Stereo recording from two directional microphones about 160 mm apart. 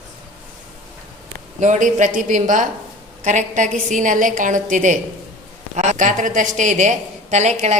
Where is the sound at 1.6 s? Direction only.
50° right (ahead or behind).